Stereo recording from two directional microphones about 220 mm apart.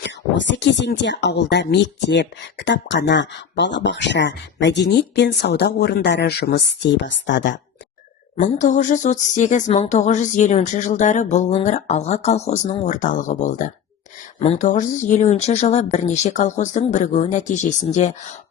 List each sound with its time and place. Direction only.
0.0 s speech: 55° left (ahead or behind)
8.4 s speech: 35° left (ahead or behind)